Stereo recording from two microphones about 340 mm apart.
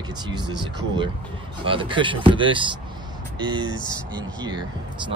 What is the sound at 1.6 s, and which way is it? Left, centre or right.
Speech, centre.